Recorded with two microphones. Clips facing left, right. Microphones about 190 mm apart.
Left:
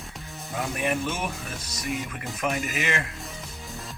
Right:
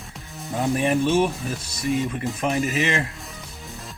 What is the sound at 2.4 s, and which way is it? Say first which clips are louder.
Speech: right 5 dB; 30° right (ahead or behind).